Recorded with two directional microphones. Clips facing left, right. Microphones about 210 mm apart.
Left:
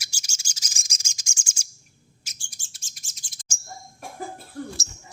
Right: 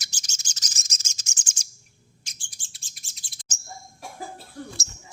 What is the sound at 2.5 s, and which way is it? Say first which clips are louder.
Chirp: even; 45° left (ahead or behind).